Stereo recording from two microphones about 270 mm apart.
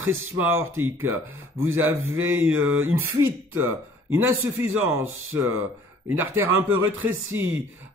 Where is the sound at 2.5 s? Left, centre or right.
Right.